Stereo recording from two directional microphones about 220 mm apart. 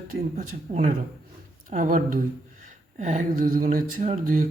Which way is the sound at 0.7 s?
35° right (ahead or behind).